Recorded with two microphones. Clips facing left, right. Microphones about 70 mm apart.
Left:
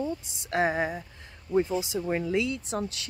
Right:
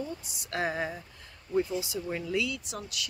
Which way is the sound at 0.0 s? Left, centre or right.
Left.